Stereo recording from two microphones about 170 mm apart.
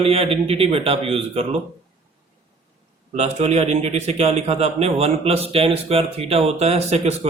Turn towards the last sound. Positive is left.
turn(degrees=-40)  # may be behind; listen again after turning